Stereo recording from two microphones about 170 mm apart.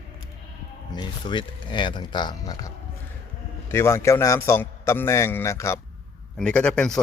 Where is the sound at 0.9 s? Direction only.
25° left (ahead or behind).